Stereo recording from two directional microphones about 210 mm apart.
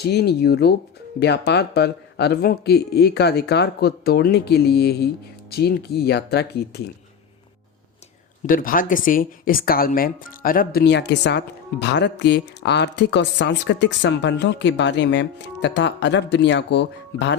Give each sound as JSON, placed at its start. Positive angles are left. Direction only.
{"t": 0.0, "sound": "speech", "side_deg": 50}
{"t": 8.4, "sound": "speech", "side_deg": 40}